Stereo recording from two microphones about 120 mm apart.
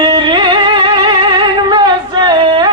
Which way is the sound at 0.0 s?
45° right (ahead or behind).